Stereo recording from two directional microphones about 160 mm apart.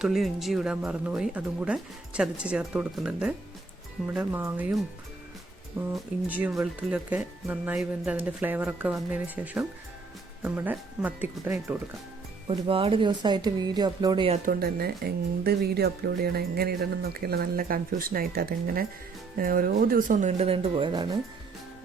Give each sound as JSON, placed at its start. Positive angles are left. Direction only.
{"t": 0.0, "sound": "speech", "side_deg": 0}
{"t": 5.9, "sound": "speech", "side_deg": -10}
{"t": 12.5, "sound": "speech", "side_deg": -35}
{"t": 14.4, "sound": "speech", "side_deg": -70}